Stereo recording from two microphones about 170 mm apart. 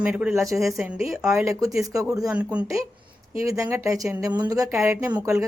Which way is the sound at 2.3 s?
5° right (ahead or behind).